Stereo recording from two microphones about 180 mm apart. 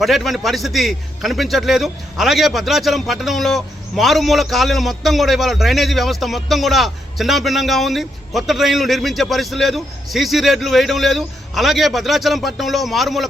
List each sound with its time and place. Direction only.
0.0 s a man's voice: centre (ahead or behind)